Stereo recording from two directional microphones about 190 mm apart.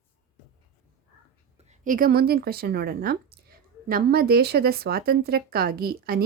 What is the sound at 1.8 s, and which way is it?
Speech, 45° right (ahead or behind).